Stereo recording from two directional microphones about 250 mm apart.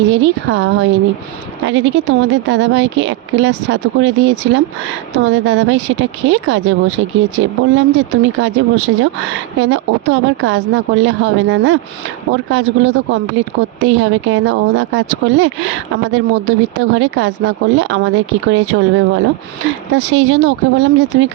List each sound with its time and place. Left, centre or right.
0.1 s speech: right